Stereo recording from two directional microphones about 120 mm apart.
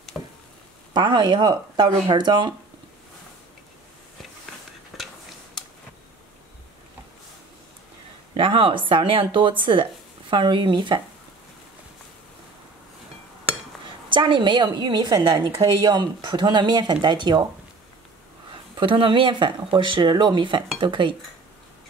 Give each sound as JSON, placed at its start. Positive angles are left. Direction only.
{"t": 0.9, "sound": "speech", "side_deg": -40}
{"t": 4.9, "sound": "a sound", "side_deg": 0}
{"t": 8.4, "sound": "speech", "side_deg": -45}
{"t": 14.0, "sound": "speech", "side_deg": -40}
{"t": 18.5, "sound": "speech", "side_deg": -45}